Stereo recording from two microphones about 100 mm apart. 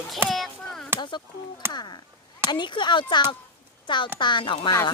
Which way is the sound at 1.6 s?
25° right (ahead or behind).